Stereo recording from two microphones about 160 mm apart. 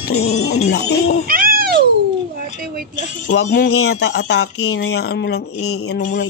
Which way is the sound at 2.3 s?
70° right (ahead or behind).